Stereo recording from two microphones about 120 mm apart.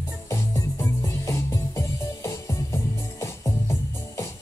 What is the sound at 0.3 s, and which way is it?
Music, 25° left (ahead or behind).